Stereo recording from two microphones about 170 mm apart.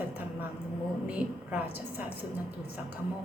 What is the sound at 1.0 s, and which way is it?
Speech, 10° right (ahead or behind).